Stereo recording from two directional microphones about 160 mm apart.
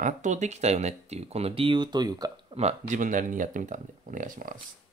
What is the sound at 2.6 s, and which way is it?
Speech, 45° right (ahead or behind).